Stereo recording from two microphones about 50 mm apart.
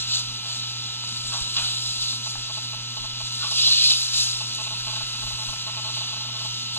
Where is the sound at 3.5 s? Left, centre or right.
Left.